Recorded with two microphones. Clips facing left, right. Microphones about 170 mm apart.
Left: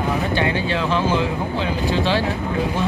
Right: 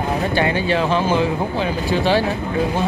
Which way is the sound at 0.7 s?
50° right (ahead or behind).